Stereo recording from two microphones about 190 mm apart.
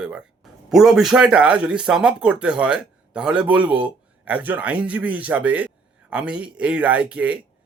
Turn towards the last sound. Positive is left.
turn(degrees=-5)  # may be behind; listen again after turning